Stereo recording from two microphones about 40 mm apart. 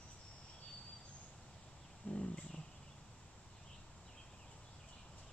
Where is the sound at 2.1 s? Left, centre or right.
Left.